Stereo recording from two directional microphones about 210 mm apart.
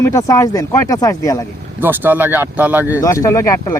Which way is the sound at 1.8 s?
10° right (ahead or behind).